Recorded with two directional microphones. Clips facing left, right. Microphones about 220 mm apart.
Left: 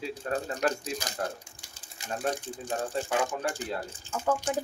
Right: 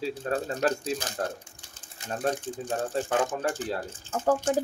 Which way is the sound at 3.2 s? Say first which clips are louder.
Right 3 dB; 10° left (ahead or behind).